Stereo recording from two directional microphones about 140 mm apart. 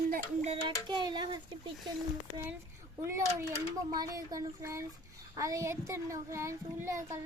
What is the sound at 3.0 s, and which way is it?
A child's voice, 20° right (ahead or behind).